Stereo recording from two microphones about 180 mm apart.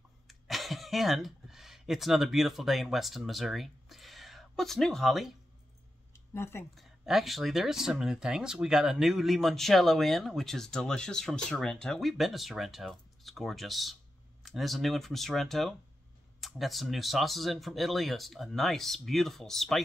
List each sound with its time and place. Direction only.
0.3 s speech: centre (ahead or behind)
6.1 s a sound: 15° left (ahead or behind)
6.7 s speech: centre (ahead or behind)